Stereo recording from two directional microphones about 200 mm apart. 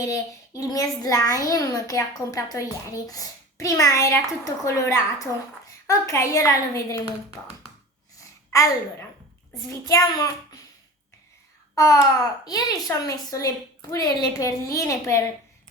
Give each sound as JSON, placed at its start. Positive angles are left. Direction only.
{"t": 0.0, "sound": "a child's voice", "side_deg": 15}
{"t": 8.5, "sound": "a child's voice", "side_deg": 15}
{"t": 11.7, "sound": "babbling", "side_deg": 15}
{"t": 12.5, "sound": "a child's voice", "side_deg": 20}